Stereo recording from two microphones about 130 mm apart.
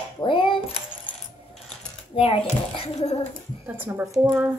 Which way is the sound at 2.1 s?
45° left (ahead or behind).